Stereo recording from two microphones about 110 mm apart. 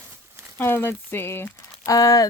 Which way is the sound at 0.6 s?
20° left (ahead or behind).